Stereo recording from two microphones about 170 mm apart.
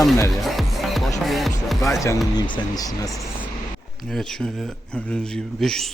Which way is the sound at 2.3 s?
25° left (ahead or behind).